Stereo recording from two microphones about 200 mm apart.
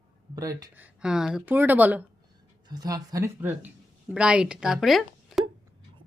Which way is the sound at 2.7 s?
20° right (ahead or behind).